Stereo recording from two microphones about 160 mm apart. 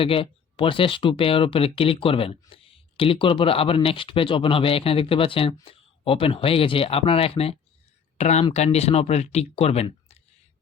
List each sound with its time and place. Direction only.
0.0 s speech: 35° left (ahead or behind)